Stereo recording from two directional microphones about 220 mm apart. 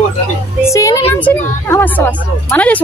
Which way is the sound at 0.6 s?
15° left (ahead or behind).